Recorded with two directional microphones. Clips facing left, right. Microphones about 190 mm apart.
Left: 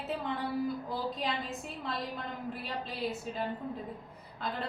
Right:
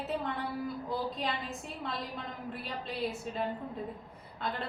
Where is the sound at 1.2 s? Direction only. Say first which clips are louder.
Left 1 dB; centre (ahead or behind).